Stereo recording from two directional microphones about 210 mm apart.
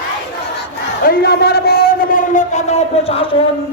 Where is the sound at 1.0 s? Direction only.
50° left (ahead or behind); by 3.2 s 30° left (ahead or behind).